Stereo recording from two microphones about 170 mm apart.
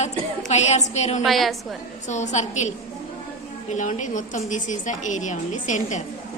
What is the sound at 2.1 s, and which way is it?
A woman's voice, 45° left (ahead or behind).